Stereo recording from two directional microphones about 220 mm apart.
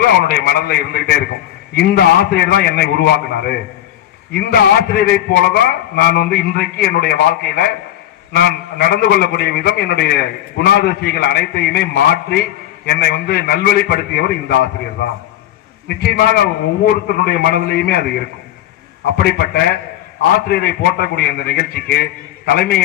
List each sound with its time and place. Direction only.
0.0 s a man's voice: 45° left (ahead or behind)
15.9 s a man's voice: 45° left (ahead or behind)
19.1 s a man's voice: 45° left (ahead or behind)